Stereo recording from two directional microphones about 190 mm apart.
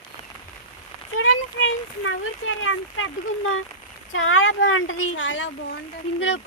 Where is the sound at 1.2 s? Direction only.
85° left.